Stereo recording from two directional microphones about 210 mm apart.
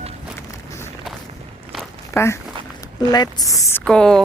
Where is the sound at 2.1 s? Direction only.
15° left (ahead or behind).